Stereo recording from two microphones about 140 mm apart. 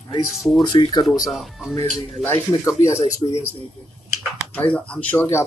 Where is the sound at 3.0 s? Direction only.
50° left (ahead or behind).